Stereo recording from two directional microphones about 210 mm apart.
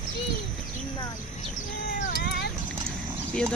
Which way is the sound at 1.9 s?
50° left (ahead or behind).